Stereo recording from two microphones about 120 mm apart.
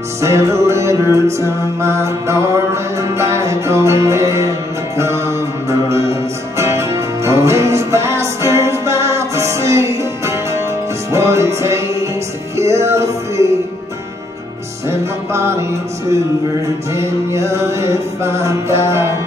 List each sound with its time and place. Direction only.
0.2 s music: 25° right (ahead or behind)
14.9 s music: 20° right (ahead or behind)
16.9 s music: 25° right (ahead or behind)